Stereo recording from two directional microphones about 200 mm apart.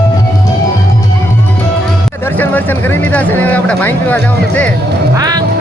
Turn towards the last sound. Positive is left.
turn(degrees=-20)  # may be behind; listen again after turning